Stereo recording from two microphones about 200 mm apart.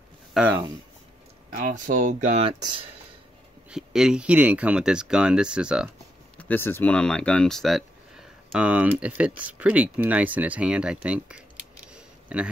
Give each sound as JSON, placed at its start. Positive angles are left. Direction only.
{"t": 0.3, "sound": "speech", "side_deg": -5}
{"t": 1.5, "sound": "speech", "side_deg": -40}
{"t": 3.7, "sound": "speech", "side_deg": -5}
{"t": 6.3, "sound": "speech", "side_deg": 10}
{"t": 11.9, "sound": "a sound", "side_deg": -5}